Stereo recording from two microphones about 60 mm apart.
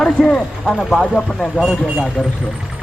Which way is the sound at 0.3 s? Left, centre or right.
Centre.